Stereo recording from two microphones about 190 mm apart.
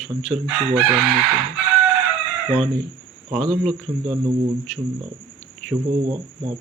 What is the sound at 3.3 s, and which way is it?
Speech, centre (ahead or behind).